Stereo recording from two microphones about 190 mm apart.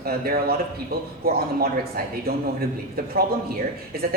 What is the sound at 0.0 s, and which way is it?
A man's voice, 55° right (ahead or behind).